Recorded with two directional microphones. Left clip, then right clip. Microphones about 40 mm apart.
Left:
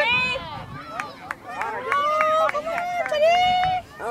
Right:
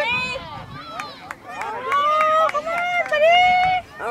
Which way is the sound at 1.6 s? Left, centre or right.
Right.